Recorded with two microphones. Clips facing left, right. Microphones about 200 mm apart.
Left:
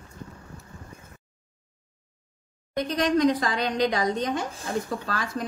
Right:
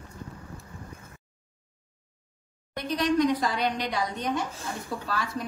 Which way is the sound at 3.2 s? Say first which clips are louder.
Left 2 dB; 90° left.